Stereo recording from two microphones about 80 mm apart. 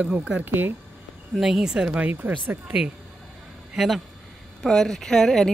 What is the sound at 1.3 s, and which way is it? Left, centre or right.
Speech, centre.